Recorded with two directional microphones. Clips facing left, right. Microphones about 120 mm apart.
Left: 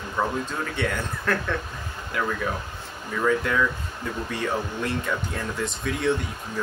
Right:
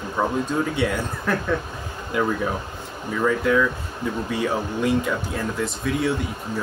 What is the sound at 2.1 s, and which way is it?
Speech, 20° right (ahead or behind).